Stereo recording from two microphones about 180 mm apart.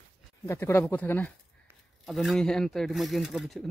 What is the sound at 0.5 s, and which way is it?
Speech, 15° left (ahead or behind).